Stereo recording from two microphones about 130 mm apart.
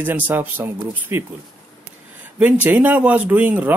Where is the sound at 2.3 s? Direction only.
15° right (ahead or behind).